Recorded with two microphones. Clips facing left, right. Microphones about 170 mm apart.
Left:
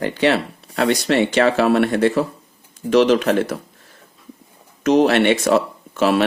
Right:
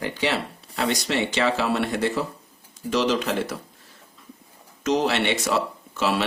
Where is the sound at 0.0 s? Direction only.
60° left (ahead or behind).